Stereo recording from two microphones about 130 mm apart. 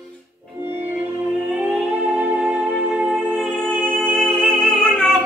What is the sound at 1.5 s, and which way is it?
Music, 10° right (ahead or behind).